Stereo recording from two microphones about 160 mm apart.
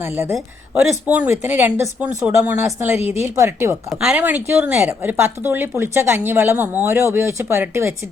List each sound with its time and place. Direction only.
0.0 s speech: 15° right (ahead or behind)
3.0 s a woman's voice: 40° left (ahead or behind)
3.3 s speech: 15° right (ahead or behind)